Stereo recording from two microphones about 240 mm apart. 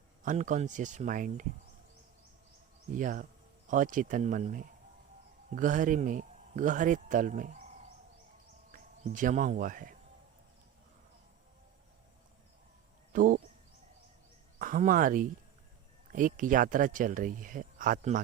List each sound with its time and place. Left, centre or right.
0.2 s a man's voice: right
2.9 s a man's voice: right
8.7 s speech: right
13.1 s speech: right
14.6 s a man's voice: right